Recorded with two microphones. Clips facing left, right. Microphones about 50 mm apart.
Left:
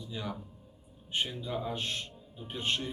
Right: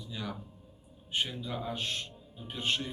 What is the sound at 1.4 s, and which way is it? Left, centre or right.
A man's voice, centre.